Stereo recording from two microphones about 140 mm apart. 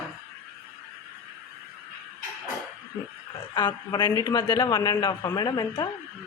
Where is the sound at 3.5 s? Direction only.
35° left (ahead or behind).